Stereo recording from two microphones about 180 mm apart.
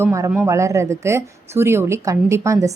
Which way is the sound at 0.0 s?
15° right (ahead or behind).